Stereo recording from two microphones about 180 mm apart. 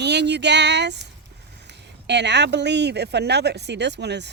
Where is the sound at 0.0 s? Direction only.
70° right (ahead or behind).